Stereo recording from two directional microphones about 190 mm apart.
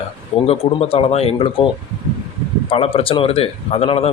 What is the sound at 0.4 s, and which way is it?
Speech, 30° left (ahead or behind).